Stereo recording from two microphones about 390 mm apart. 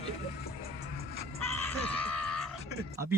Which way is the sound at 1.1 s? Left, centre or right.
Right.